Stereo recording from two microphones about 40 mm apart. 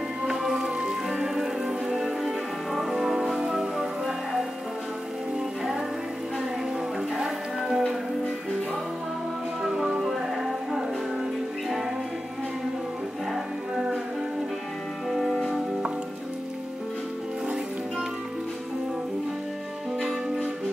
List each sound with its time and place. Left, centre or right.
0.3 s music: centre
3.7 s music: centre
7.2 s music: centre
9.8 s music: centre
15.0 s music: centre